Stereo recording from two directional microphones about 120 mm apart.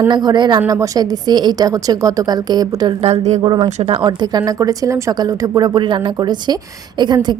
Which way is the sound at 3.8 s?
50° right (ahead or behind).